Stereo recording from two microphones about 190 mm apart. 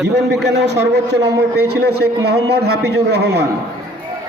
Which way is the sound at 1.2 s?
15° right (ahead or behind).